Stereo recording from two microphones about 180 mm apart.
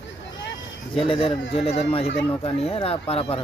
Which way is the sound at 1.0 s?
30° left (ahead or behind).